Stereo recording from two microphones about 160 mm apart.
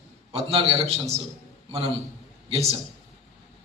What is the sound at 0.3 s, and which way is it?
Speech, 35° right (ahead or behind).